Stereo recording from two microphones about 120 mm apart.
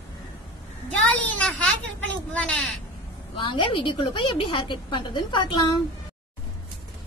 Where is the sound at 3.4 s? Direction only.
45° left (ahead or behind).